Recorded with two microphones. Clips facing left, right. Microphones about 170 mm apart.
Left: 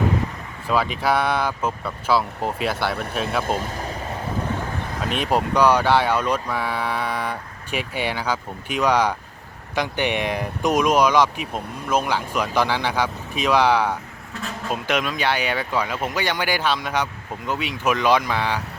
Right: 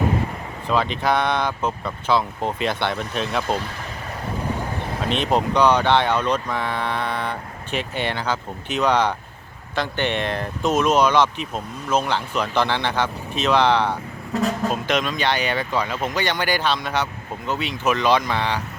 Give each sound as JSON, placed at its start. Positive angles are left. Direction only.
{"t": 0.7, "sound": "speech", "side_deg": 5}
{"t": 3.4, "sound": "speech", "side_deg": 45}
{"t": 5.0, "sound": "speech", "side_deg": 10}
{"t": 14.3, "sound": "speech", "side_deg": -40}
{"t": 14.8, "sound": "speech", "side_deg": 10}